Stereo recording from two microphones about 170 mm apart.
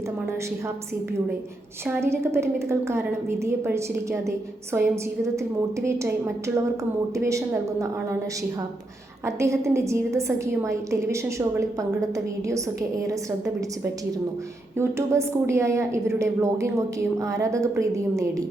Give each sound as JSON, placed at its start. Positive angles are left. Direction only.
{"t": 1.9, "sound": "a woman's voice", "side_deg": -15}
{"t": 9.2, "sound": "a woman's voice", "side_deg": -15}
{"t": 14.8, "sound": "a woman's voice", "side_deg": -15}